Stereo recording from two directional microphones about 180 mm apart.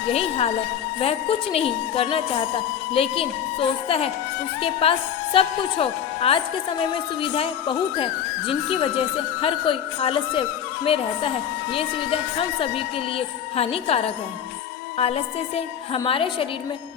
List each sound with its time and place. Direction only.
0.1 s a woman's voice: 35° left (ahead or behind)